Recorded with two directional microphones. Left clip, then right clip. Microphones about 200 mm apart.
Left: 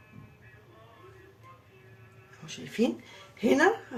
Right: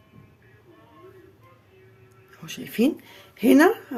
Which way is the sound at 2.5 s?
50° right (ahead or behind).